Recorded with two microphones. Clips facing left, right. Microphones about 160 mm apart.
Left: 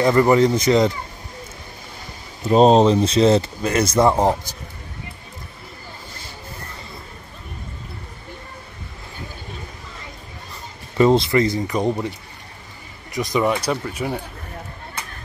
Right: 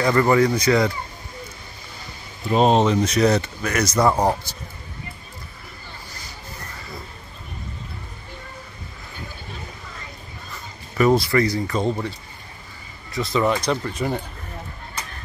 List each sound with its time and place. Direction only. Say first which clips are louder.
0.0 s speech: left 2 dB; 20° left (ahead or behind)
2.4 s speech: left 4 dB; 35° left (ahead or behind); by 4.6 s 20° left (ahead or behind)
11.0 s speech: left 2 dB; 25° left (ahead or behind); by 14.2 s 5° left (ahead or behind)